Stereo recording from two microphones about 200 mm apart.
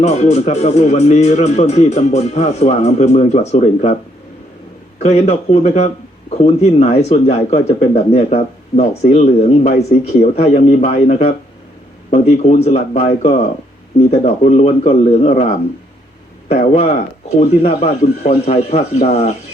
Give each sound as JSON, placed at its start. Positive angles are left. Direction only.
{"t": 0.0, "sound": "speech", "side_deg": 35}
{"t": 4.9, "sound": "speech", "side_deg": 35}
{"t": 16.5, "sound": "speech", "side_deg": 35}